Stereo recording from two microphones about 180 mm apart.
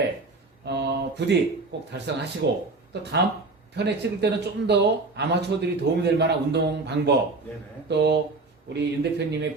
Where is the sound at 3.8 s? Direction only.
70° right (ahead or behind).